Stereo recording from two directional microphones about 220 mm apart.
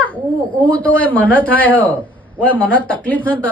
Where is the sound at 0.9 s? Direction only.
5° left (ahead or behind).